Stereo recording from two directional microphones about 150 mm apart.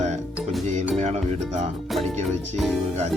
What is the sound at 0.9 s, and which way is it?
Speech, 50° right (ahead or behind).